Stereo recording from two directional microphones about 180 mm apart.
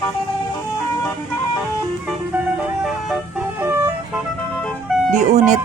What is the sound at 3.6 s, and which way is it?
Vehicle, 10° right (ahead or behind).